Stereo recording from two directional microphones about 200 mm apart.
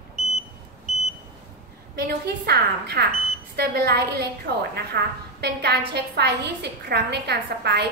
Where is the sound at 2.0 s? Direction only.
55° right (ahead or behind).